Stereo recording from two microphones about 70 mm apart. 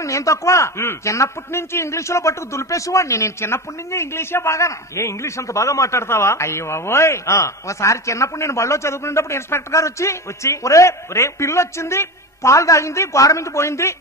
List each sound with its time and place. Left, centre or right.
0.0 s a man's voice: left